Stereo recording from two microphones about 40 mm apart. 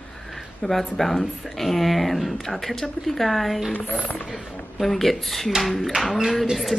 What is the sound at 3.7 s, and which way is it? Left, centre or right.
Speech, left.